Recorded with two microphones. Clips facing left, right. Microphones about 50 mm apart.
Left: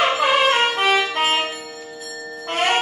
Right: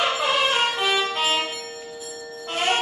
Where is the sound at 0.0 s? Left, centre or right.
Left.